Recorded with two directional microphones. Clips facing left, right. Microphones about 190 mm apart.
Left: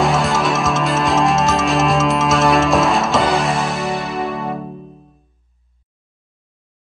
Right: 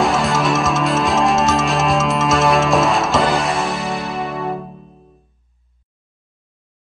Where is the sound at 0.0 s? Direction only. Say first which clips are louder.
Even; centre (ahead or behind).